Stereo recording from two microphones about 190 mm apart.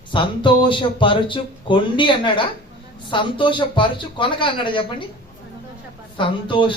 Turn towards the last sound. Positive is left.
turn(degrees=25)  # may be behind; listen again after turning